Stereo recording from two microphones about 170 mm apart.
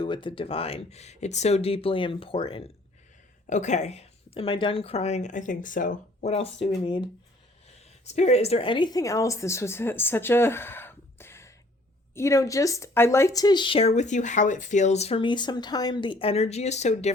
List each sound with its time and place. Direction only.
0.0 s speech: 30° left (ahead or behind)
3.4 s speech: 45° left (ahead or behind); by 7.1 s 30° left (ahead or behind)
8.0 s speech: 40° left (ahead or behind)